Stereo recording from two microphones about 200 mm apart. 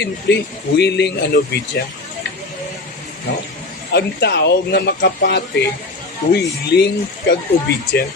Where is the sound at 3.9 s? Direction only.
60° left (ahead or behind).